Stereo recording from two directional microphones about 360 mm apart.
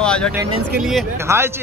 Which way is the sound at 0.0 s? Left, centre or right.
Centre.